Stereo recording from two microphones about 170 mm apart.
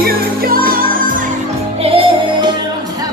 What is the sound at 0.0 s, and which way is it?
Music, 60° right (ahead or behind).